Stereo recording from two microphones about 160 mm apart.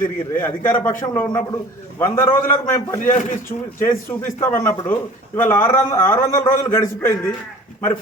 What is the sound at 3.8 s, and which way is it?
A man's voice, 15° left (ahead or behind).